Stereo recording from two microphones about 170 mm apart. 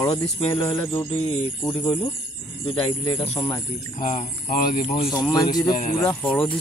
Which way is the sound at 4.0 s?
50° left (ahead or behind).